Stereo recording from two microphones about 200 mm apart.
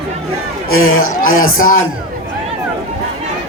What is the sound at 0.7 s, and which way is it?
Speech, 90° left.